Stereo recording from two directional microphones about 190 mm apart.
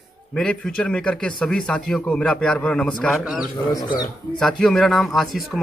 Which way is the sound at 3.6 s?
20° left (ahead or behind).